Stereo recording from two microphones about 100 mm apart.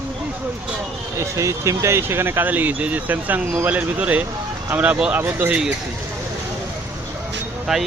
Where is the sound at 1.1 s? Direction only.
30° right (ahead or behind); by 5.7 s 15° right (ahead or behind).